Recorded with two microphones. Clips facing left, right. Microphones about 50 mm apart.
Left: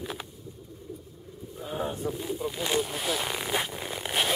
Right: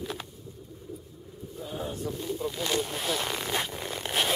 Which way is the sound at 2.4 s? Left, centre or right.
Centre.